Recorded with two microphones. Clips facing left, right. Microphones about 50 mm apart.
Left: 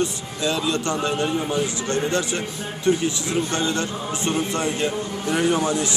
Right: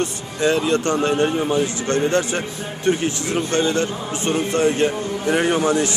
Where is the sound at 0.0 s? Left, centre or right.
Right.